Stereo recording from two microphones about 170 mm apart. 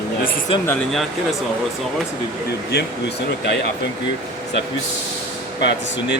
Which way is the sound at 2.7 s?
70° left (ahead or behind).